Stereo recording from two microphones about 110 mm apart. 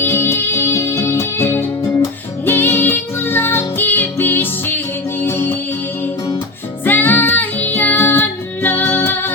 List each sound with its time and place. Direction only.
0.0 s music: 20° left (ahead or behind)
6.8 s music: 15° left (ahead or behind)